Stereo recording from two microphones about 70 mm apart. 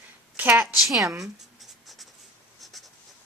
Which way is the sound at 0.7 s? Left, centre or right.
Centre.